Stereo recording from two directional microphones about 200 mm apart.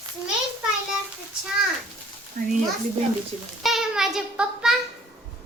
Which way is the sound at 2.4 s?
40° right (ahead or behind).